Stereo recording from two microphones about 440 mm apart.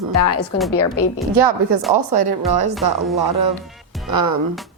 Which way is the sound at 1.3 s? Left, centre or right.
Right.